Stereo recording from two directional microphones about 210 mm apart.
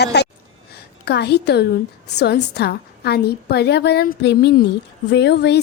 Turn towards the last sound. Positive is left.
turn(degrees=55)  # may be behind; listen again after turning